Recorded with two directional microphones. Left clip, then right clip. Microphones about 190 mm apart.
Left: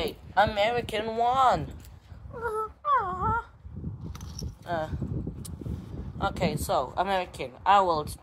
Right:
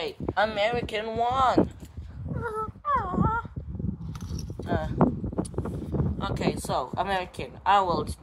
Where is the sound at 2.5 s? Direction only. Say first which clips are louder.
Left 1 dB; 10° left (ahead or behind).